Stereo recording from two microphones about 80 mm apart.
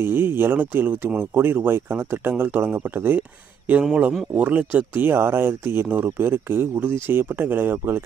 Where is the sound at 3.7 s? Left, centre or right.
Centre.